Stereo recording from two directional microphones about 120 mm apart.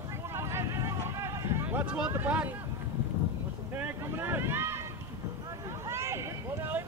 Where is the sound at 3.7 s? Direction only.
15° right (ahead or behind).